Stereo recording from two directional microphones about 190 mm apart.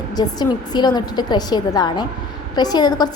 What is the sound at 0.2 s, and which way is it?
A woman's voice, 20° left (ahead or behind).